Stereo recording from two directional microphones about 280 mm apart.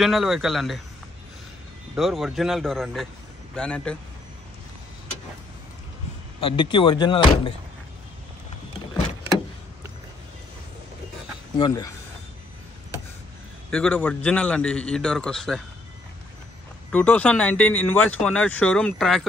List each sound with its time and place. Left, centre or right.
0.0 s speech: centre
2.0 s speech: centre
6.4 s speech: centre
11.5 s speech: centre
13.7 s speech: centre
16.9 s speech: centre